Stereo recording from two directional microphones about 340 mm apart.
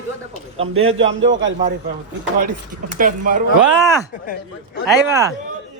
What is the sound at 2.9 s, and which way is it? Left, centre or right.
Speech, right.